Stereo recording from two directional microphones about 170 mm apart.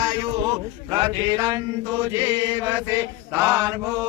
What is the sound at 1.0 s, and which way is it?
Mantra, 25° right (ahead or behind).